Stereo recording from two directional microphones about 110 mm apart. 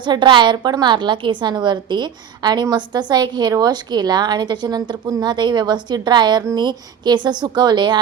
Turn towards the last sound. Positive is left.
turn(degrees=-45)  # may be behind; listen again after turning